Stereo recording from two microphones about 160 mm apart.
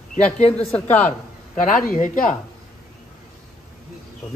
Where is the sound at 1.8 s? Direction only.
50° left (ahead or behind).